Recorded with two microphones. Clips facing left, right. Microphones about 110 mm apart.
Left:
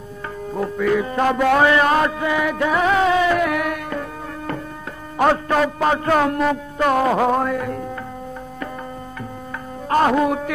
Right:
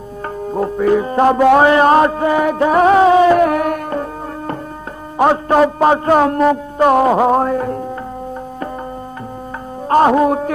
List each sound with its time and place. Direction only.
0.5 s music: 35° right (ahead or behind)
5.1 s a man's voice: 25° right (ahead or behind)
7.3 s speech: 35° right (ahead or behind)
9.8 s speech: 30° right (ahead or behind)